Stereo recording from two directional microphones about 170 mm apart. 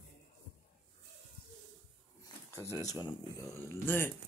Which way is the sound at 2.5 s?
20° left (ahead or behind).